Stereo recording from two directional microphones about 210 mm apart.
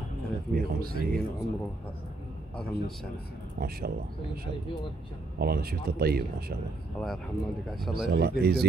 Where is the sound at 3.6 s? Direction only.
45° right (ahead or behind).